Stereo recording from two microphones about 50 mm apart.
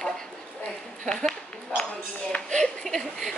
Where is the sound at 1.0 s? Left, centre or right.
Centre.